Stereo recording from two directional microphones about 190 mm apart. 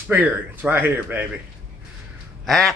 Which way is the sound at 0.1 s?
10° right (ahead or behind).